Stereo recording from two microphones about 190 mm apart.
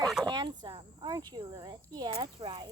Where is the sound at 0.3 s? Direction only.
25° right (ahead or behind).